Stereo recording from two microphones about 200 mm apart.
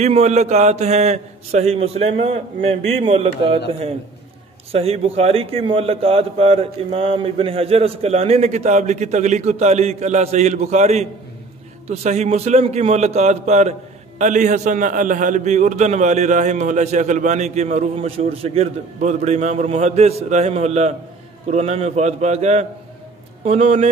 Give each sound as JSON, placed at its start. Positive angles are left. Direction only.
{"t": 0.0, "sound": "a man's voice", "side_deg": -35}